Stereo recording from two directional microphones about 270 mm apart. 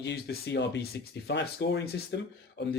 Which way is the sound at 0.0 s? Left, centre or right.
Left.